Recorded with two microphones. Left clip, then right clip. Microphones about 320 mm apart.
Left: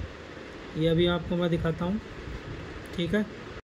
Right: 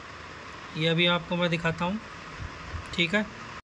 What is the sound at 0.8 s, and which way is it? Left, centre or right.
Speech, right.